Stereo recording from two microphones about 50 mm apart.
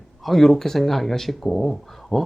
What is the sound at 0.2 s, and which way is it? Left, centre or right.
Speech, centre.